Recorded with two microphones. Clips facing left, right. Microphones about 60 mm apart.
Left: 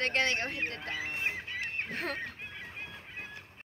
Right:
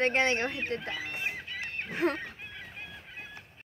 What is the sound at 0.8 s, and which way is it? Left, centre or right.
Fowl, left.